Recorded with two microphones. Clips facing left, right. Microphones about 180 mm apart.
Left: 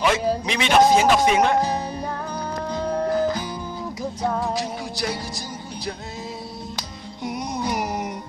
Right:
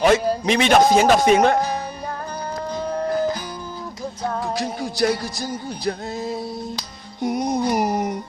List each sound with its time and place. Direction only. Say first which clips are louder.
0.0 s a man's voice: right 4 dB; 45° right (ahead or behind)
4.5 s music: right 2 dB; 55° right (ahead or behind)
7.2 s music: right 7 dB; 45° right (ahead or behind)